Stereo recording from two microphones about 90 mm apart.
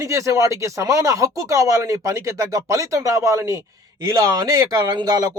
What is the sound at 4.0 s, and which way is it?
Speech, 45° right (ahead or behind).